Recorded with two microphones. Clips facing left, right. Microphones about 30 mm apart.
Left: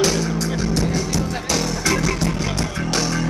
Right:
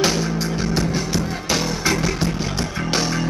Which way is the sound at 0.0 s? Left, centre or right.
Centre.